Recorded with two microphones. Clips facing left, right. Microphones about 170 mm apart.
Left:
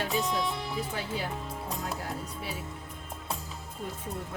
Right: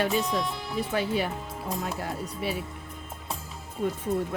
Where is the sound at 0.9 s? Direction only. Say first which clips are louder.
Right 7 dB; 70° right (ahead or behind).